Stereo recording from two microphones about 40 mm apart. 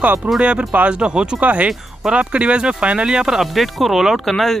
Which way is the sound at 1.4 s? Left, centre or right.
Right.